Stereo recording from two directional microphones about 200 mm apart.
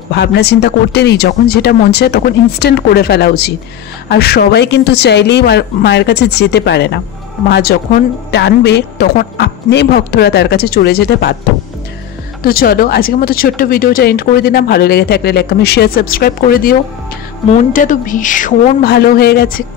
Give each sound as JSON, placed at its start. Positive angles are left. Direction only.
{"t": 0.1, "sound": "speech", "side_deg": 55}
{"t": 12.4, "sound": "speech", "side_deg": 45}
{"t": 17.7, "sound": "speech", "side_deg": 40}